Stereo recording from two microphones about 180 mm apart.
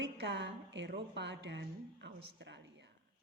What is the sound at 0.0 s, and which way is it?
Speech, 80° right.